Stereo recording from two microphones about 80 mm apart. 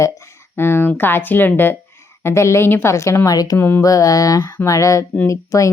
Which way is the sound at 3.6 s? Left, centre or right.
Left.